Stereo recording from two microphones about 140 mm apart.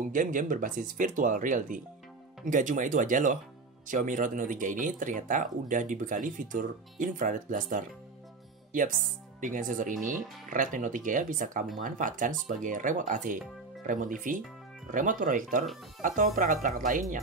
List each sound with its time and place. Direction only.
0.0 s speech: 70° right (ahead or behind)
9.4 s speech: 70° right (ahead or behind)